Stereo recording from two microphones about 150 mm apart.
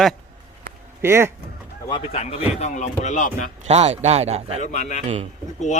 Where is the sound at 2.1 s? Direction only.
45° left (ahead or behind).